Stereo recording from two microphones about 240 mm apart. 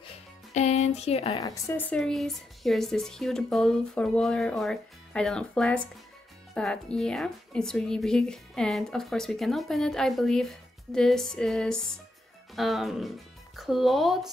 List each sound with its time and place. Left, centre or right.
0.6 s speech: left
1.4 s speech: centre